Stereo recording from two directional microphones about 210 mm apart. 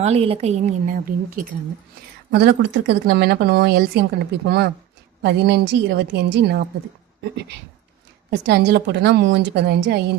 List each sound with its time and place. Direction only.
0.0 s a woman's voice: 30° right (ahead or behind)
2.3 s speech: 50° right (ahead or behind)
8.3 s speech: 50° right (ahead or behind)